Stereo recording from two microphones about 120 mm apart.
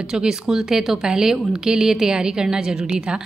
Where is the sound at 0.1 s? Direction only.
5° right (ahead or behind).